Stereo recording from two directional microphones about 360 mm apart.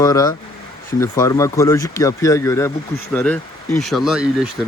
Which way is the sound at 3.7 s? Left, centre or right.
Centre.